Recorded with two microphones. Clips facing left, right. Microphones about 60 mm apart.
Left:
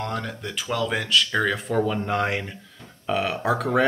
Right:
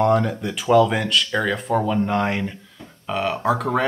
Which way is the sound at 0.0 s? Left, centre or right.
Centre.